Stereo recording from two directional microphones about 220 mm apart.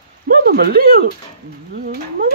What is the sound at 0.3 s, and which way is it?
Speech, 45° right (ahead or behind).